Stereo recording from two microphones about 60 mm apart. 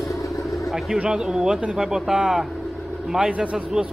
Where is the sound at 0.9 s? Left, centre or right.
Centre.